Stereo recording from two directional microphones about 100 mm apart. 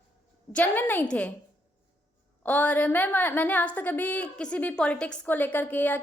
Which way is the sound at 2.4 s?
15° left (ahead or behind).